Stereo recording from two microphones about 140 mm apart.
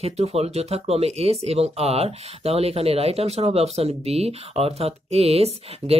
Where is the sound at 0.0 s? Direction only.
50° right (ahead or behind).